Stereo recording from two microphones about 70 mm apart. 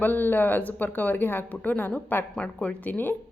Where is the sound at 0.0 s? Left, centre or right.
Left.